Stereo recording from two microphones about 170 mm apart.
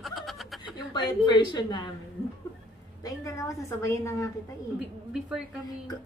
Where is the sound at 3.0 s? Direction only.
20° left (ahead or behind).